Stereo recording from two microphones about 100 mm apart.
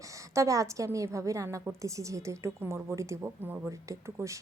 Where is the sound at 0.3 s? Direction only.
30° right (ahead or behind).